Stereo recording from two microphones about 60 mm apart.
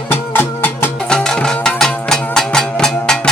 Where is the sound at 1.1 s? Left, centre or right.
Centre.